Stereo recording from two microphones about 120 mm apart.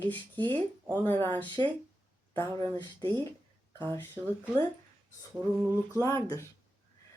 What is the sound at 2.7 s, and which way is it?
Speech, 35° left (ahead or behind).